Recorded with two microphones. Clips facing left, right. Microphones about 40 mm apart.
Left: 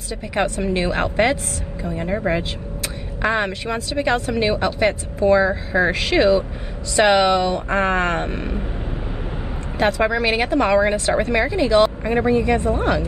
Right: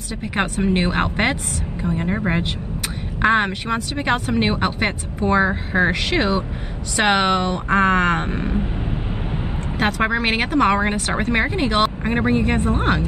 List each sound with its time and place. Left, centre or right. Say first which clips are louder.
0.4 s speech: even; right
2.0 s speech: left 2 dB; centre
3.2 s speech: right 3 dB; right
7.7 s speech: right 5 dB; right
9.8 s speech: left 2 dB; right